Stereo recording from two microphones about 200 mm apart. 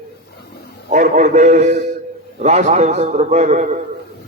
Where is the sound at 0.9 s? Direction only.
40° right (ahead or behind).